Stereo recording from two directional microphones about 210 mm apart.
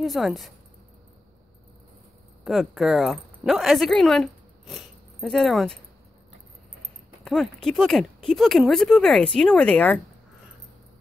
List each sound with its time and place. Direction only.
0.0 s speech: centre (ahead or behind)
2.4 s a woman's voice: centre (ahead or behind)
7.2 s speech: centre (ahead or behind)